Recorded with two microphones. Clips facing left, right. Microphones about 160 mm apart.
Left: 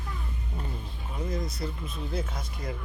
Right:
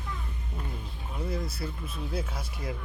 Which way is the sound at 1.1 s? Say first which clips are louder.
Left 1 dB; 10° right (ahead or behind).